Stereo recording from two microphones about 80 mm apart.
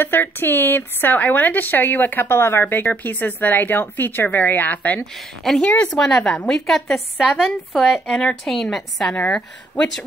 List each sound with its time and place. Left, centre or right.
0.0 s speech: left
5.1 s a woman's voice: centre
9.1 s speech: centre